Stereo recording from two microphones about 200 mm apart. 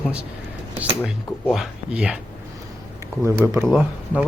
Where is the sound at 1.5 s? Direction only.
5° right (ahead or behind).